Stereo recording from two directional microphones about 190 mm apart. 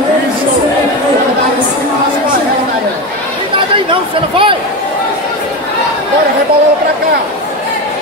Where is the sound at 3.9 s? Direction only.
25° right (ahead or behind).